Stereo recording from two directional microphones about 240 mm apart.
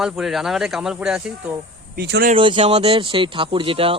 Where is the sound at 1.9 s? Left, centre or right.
Right.